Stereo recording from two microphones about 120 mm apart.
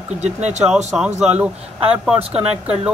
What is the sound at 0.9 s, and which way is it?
Speech, 10° right (ahead or behind).